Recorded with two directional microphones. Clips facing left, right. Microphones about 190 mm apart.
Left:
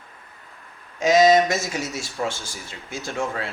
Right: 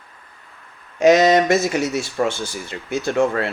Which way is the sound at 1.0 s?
60° right (ahead or behind).